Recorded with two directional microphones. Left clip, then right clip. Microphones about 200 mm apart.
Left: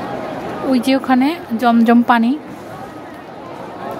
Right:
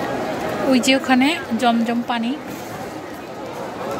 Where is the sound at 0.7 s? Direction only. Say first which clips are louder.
Left 1 dB; 20° left (ahead or behind).